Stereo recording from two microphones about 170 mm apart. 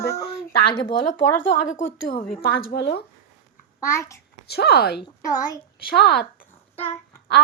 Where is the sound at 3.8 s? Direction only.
15° left (ahead or behind).